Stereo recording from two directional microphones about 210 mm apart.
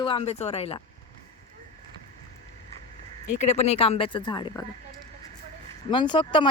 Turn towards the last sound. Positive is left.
turn(degrees=25)  # may be behind; listen again after turning